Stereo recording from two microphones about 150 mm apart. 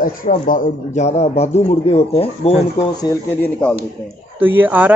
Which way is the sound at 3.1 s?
25° left (ahead or behind).